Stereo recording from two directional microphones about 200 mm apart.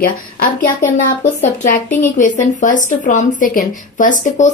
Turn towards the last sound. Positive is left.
turn(degrees=40)  # may be behind; listen again after turning